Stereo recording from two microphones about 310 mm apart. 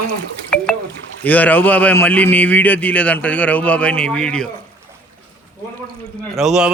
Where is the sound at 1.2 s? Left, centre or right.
Centre.